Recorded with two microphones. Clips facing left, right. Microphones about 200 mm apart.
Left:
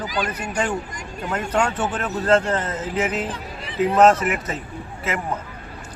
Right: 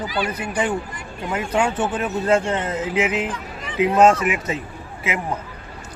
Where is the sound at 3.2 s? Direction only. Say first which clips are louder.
Right 1 dB; 35° left (ahead or behind).